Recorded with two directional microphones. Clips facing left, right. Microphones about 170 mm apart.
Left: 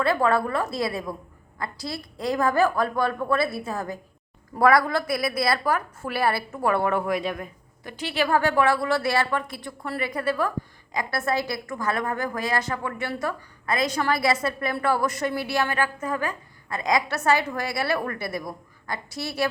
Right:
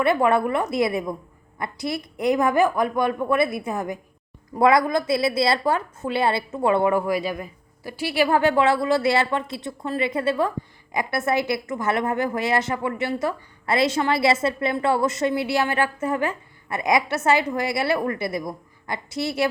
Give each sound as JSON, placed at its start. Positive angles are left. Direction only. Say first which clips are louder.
{"t": 0.0, "sound": "a woman's voice", "louder": "right 3 dB", "side_deg": -20}
{"t": 6.9, "sound": "a woman's voice", "louder": "right 2 dB", "side_deg": 0}